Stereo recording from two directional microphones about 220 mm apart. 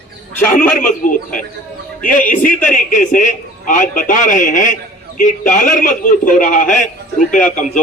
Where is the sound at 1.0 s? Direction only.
35° left (ahead or behind).